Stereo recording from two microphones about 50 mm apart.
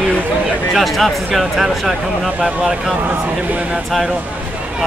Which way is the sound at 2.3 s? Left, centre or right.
Centre.